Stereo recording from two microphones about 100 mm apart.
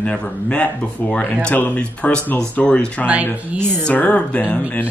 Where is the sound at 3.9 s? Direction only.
15° left (ahead or behind).